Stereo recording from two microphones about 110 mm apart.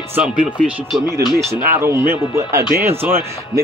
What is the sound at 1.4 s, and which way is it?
Speech, 25° right (ahead or behind).